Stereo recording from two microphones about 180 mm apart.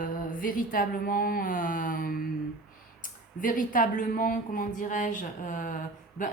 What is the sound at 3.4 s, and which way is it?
A woman's voice, 50° left (ahead or behind).